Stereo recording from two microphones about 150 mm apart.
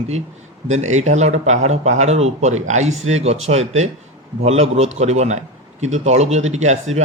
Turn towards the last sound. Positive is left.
turn(degrees=-50)  # may be behind; listen again after turning